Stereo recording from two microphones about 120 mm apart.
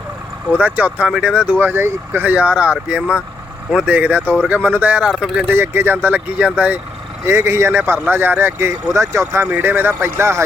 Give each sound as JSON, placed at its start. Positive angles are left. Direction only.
{"t": 0.6, "sound": "speech", "side_deg": -10}
{"t": 5.5, "sound": "speech", "side_deg": -20}
{"t": 7.3, "sound": "speech", "side_deg": -25}